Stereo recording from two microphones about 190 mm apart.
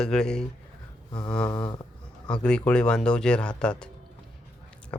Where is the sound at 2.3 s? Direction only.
5° left (ahead or behind).